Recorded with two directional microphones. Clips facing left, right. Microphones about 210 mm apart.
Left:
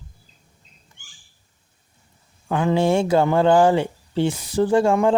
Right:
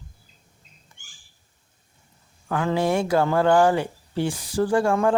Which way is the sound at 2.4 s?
20° left (ahead or behind).